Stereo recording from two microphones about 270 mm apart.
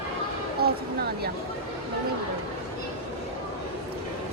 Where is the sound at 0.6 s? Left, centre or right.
Right.